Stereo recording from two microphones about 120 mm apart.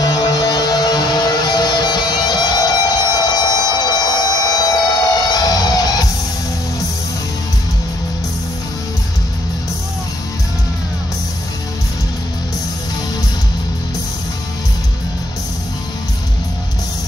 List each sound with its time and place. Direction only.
0.0 s music: 30° left (ahead or behind)